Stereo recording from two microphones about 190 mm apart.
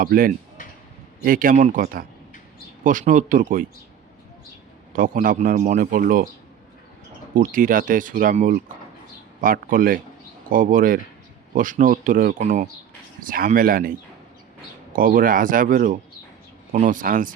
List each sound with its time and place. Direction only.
0.0 s a man's voice: 50° right (ahead or behind)
4.9 s a man's voice: 45° right (ahead or behind)
7.3 s a man's voice: 45° right (ahead or behind)
14.9 s a man's voice: 45° right (ahead or behind)